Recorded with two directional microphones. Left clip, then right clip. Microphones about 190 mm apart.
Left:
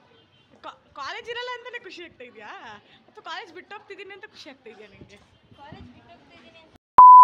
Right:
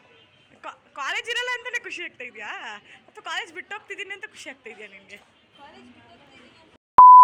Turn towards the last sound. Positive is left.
turn(degrees=0)  # may be behind; listen again after turning